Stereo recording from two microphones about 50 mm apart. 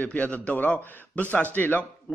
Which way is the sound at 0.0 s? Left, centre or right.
Left.